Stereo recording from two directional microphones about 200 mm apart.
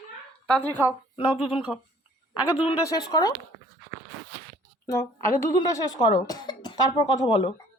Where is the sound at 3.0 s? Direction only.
20° left (ahead or behind).